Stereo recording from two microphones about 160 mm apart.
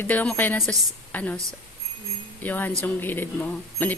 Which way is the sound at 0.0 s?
10° left (ahead or behind).